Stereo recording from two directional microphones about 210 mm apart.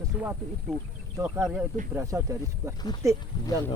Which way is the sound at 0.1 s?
5° right (ahead or behind).